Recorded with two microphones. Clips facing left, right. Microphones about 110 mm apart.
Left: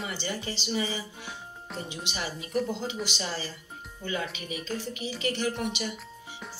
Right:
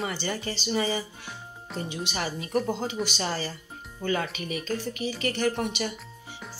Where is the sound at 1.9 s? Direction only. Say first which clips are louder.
Right 5 dB; 40° right (ahead or behind).